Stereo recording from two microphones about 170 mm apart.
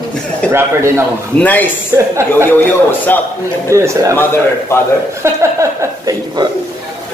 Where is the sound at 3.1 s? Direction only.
10° left (ahead or behind).